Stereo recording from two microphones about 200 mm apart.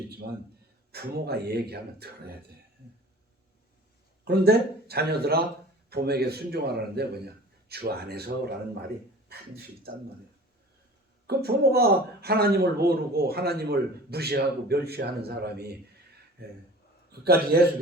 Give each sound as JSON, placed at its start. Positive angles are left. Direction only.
{"t": 0.9, "sound": "a man's voice", "side_deg": -50}
{"t": 4.3, "sound": "a man's voice", "side_deg": -50}
{"t": 11.3, "sound": "a man's voice", "side_deg": -50}
{"t": 17.1, "sound": "a man's voice", "side_deg": -50}